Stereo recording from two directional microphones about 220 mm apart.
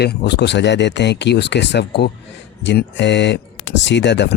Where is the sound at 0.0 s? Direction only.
45° left (ahead or behind).